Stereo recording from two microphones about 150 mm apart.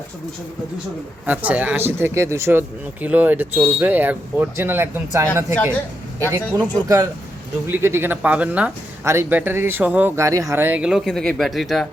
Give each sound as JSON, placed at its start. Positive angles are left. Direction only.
{"t": 1.3, "sound": "speech", "side_deg": -10}